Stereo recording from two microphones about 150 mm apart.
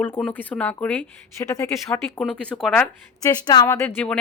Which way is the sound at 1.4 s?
20° left (ahead or behind).